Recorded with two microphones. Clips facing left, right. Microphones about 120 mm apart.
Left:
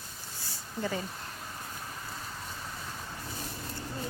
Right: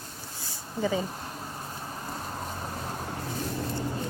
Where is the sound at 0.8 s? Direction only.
10° right (ahead or behind).